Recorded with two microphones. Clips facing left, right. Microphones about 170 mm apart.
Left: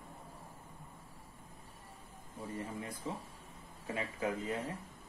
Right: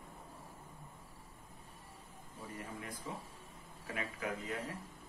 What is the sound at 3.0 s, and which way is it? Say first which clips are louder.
Speech: left 3 dB; 25° left (ahead or behind).